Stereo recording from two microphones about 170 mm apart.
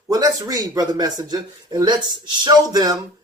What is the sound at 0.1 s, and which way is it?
Speech, 20° right (ahead or behind).